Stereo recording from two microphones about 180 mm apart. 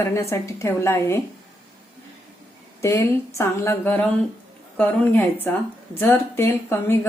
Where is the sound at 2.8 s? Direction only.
15° left (ahead or behind).